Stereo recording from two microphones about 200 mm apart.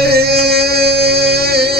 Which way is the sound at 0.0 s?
50° right (ahead or behind).